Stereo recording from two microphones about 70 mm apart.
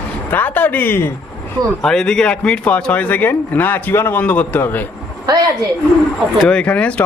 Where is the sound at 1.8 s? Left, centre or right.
Centre; by 4.8 s left.